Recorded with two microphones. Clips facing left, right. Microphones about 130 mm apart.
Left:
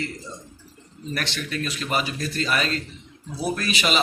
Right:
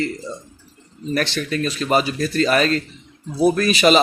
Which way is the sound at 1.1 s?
40° right (ahead or behind).